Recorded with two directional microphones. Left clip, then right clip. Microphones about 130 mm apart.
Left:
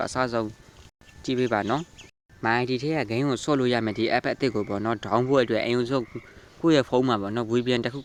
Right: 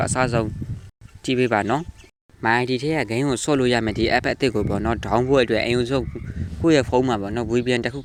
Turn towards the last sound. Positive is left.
turn(degrees=-15)  # may be behind; listen again after turning